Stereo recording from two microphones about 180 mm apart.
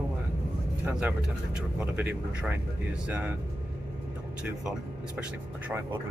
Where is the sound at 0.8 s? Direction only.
10° right (ahead or behind).